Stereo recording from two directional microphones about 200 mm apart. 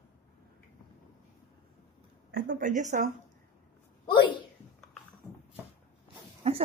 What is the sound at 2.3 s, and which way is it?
Speech, 45° right (ahead or behind).